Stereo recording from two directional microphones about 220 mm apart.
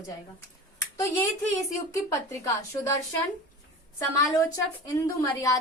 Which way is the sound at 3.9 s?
15° left (ahead or behind).